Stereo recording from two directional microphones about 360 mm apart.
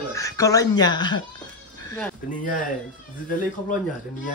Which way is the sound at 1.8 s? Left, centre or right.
Centre.